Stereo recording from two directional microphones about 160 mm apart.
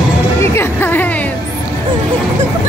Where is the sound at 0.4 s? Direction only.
15° left (ahead or behind).